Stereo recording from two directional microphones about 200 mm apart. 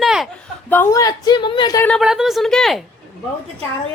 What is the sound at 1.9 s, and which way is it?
Speech, centre (ahead or behind).